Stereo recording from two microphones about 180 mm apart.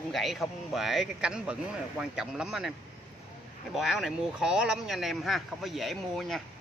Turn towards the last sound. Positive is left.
turn(degrees=0)  # may be behind; listen again after turning